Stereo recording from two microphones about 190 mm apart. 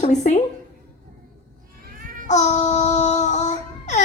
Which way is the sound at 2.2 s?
40° left (ahead or behind).